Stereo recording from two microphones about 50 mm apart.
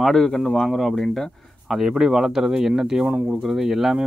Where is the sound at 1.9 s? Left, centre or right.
Centre.